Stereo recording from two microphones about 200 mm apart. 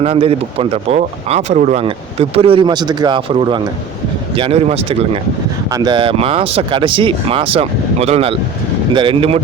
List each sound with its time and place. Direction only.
0.0 s speech: 30° right (ahead or behind)